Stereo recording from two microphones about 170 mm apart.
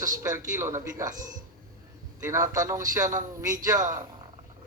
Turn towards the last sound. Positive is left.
turn(degrees=-20)  # may be behind; listen again after turning